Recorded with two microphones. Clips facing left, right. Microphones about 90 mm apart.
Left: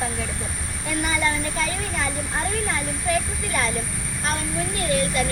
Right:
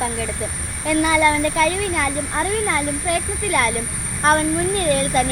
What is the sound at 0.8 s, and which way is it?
Speech, 85° right.